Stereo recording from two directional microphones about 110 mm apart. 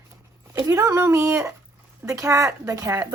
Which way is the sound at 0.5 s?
30° right (ahead or behind).